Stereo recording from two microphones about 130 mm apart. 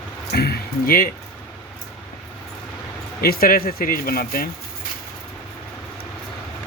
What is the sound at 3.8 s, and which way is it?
Speech, 90° left.